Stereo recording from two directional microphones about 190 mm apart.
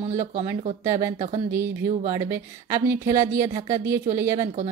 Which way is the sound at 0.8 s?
15° right (ahead or behind).